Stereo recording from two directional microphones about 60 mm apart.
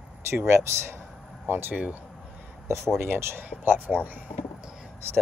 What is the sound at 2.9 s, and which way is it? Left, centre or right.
Speech, right.